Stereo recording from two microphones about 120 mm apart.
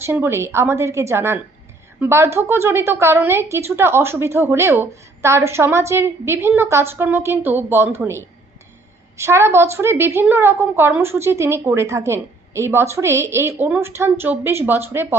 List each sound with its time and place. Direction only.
0.0 s a woman's voice: 20° right (ahead or behind)